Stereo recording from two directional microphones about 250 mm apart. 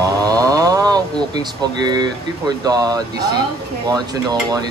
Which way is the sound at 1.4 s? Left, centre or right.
Centre.